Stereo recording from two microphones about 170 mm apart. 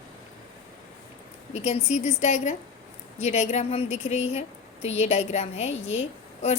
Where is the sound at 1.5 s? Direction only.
40° left (ahead or behind).